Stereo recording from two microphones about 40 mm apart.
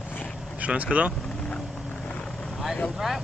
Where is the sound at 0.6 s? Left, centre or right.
Right.